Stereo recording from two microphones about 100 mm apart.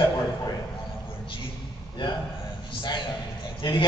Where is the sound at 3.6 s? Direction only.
55° left (ahead or behind).